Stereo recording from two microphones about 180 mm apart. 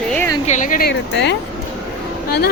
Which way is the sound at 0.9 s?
75° left (ahead or behind).